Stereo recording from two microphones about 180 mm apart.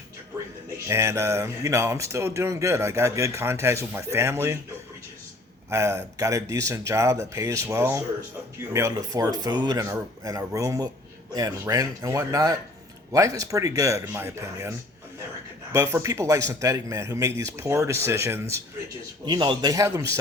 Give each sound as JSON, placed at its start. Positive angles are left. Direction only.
{"t": 0.9, "sound": "speech", "side_deg": -15}
{"t": 5.7, "sound": "speech", "side_deg": -15}
{"t": 19.2, "sound": "speech", "side_deg": -25}